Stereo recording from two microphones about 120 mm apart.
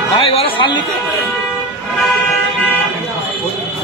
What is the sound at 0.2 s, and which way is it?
Music, 50° left (ahead or behind).